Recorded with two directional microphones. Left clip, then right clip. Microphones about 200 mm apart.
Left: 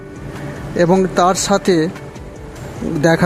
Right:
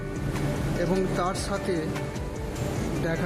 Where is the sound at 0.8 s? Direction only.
40° left (ahead or behind).